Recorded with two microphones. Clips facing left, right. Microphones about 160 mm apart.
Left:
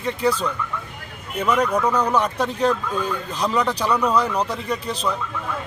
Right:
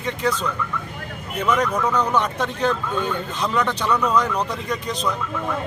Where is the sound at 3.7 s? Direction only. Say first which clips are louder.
Left 1 dB; 35° left (ahead or behind).